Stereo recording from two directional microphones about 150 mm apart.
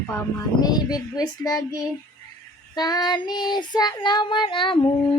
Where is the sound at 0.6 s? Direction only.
25° left (ahead or behind).